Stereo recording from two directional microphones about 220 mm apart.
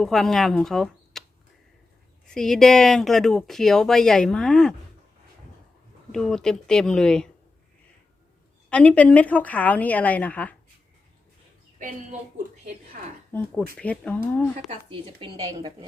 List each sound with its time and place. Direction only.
0.0 s speech: centre (ahead or behind)
2.2 s speech: centre (ahead or behind)
6.1 s speech: centre (ahead or behind)
8.7 s a woman's voice: 5° left (ahead or behind)
12.9 s speech: 40° right (ahead or behind)
13.3 s a woman's voice: 5° left (ahead or behind)
14.7 s speech: 25° right (ahead or behind)